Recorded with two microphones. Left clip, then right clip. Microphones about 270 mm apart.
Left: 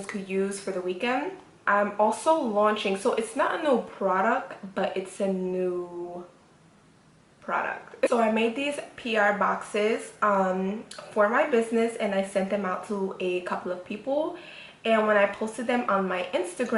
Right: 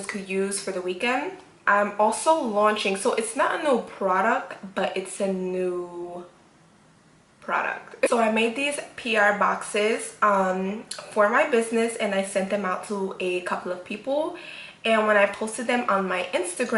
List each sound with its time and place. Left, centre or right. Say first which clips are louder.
0.0 s speech: right 2 dB; centre
7.4 s speech: right 3 dB; centre
12.9 s speech: right 1 dB; centre
13.1 s speech: right 2 dB; centre
14.1 s speech: right 2 dB; left
14.3 s speech: right 4 dB; centre